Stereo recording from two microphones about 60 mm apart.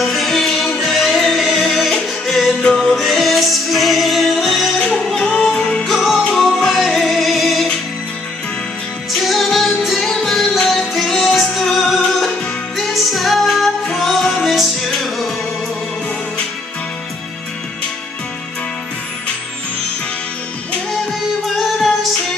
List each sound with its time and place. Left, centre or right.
0.0 s music: centre
5.2 s music: centre
5.9 s music: centre
9.1 s music: centre